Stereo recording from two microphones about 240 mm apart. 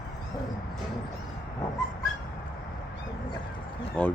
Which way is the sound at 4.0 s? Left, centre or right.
Centre.